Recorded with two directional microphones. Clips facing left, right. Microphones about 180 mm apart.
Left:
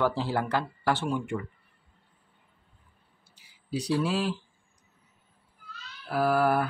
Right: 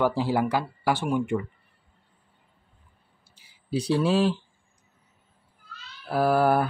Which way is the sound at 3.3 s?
30° right (ahead or behind).